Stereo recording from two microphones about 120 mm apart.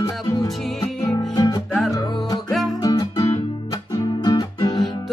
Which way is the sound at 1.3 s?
35° left (ahead or behind).